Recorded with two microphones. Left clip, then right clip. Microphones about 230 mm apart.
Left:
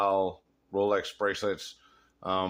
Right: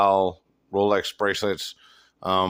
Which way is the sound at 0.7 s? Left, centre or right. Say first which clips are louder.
Right 6 dB; right.